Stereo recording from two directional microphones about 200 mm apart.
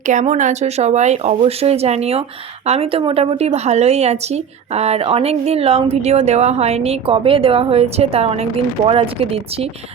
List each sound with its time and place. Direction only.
0.1 s a woman's voice: 35° right (ahead or behind)